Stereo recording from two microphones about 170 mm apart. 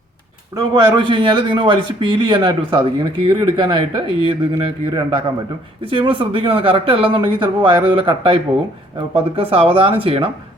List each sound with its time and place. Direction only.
0.5 s a man's voice: 25° right (ahead or behind)